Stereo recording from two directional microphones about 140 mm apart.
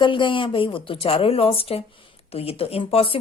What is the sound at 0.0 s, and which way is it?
A woman's voice, 35° left (ahead or behind).